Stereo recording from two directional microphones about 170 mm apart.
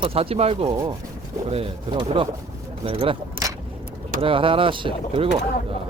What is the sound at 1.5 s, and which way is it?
Speech, 35° right (ahead or behind).